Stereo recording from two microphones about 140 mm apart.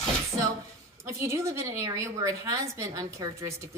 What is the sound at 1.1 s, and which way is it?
A woman's voice, 20° right (ahead or behind).